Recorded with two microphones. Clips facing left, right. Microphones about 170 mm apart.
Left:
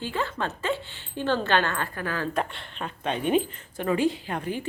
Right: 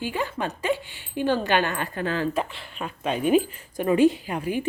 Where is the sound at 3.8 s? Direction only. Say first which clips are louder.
Right 5 dB; 20° right (ahead or behind).